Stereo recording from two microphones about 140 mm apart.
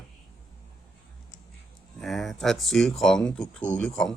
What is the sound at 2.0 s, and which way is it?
Speech, centre (ahead or behind).